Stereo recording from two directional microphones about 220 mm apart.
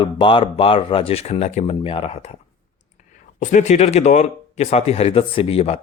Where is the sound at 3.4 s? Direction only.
35° left (ahead or behind).